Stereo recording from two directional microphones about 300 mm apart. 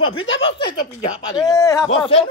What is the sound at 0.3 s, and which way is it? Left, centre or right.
Speech, left.